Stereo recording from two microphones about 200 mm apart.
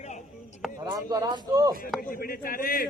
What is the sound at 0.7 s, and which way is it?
Speech, 15° right (ahead or behind).